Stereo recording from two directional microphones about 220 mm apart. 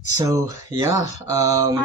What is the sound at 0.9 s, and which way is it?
Speech, 30° left (ahead or behind).